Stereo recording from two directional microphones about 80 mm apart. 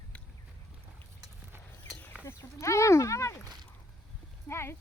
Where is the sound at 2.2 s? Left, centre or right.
Left.